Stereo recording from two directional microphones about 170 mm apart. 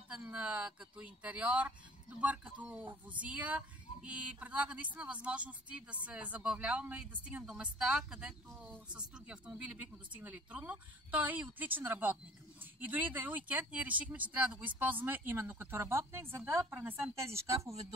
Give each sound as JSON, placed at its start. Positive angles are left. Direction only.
{"t": 0.1, "sound": "speech", "side_deg": -10}